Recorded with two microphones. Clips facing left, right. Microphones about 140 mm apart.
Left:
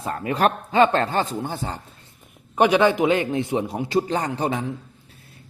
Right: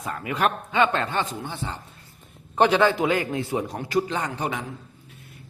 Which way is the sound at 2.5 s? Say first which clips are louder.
Left 2 dB; 15° left (ahead or behind).